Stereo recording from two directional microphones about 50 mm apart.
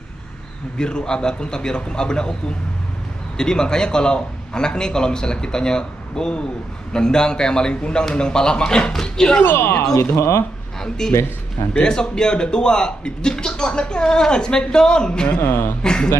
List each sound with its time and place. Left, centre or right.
0.7 s a man's voice: centre
3.3 s a man's voice: centre
9.4 s speech: left
10.1 s speech: left
10.8 s a man's voice: centre
15.4 s speech: left
15.8 s a man's voice: centre